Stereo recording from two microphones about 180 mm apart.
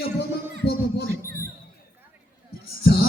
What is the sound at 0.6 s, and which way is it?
Music, 65° left (ahead or behind).